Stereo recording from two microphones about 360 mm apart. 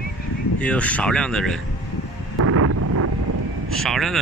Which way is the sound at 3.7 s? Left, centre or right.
Centre.